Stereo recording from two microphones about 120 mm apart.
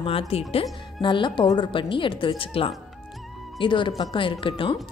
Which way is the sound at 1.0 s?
40° left (ahead or behind).